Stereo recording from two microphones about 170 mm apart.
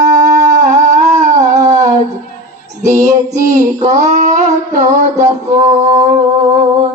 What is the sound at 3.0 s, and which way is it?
Child singing, 20° right (ahead or behind).